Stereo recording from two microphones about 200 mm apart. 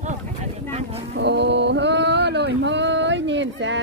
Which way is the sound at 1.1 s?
60° right (ahead or behind).